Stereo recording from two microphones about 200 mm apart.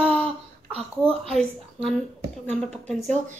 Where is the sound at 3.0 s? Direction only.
35° right (ahead or behind).